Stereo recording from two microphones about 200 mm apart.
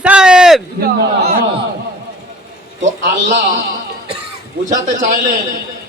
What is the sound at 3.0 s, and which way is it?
Speech, 65° right (ahead or behind).